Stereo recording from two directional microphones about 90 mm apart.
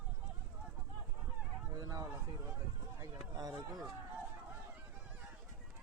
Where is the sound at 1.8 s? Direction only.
40° right (ahead or behind).